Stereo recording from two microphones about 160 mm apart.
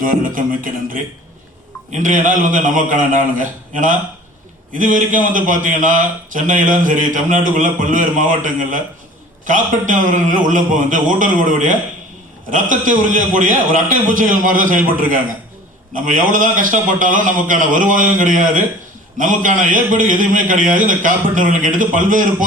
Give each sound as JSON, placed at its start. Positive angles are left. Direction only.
{"t": 0.0, "sound": "a man's voice", "side_deg": -60}